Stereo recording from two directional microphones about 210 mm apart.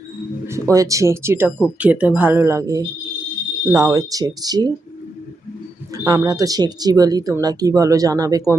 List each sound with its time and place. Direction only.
0.4 s speech: 15° right (ahead or behind)
6.1 s speech: 15° right (ahead or behind)